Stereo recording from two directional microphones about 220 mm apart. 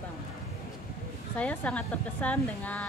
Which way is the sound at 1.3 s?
5° left (ahead or behind).